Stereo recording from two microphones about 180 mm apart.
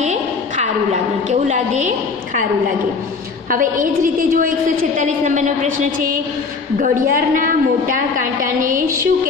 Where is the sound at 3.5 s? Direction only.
50° right (ahead or behind).